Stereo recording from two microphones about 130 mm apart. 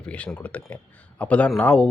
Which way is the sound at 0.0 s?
10° left (ahead or behind).